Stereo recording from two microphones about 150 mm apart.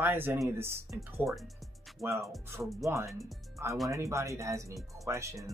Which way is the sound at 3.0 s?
Centre (ahead or behind).